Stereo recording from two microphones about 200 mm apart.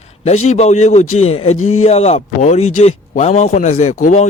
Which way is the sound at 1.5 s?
90° left.